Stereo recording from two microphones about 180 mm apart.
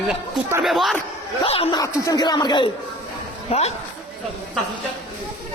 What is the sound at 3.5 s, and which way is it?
Speech, 35° left (ahead or behind).